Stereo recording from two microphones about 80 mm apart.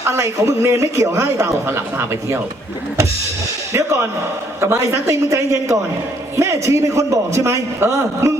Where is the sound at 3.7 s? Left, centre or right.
Right.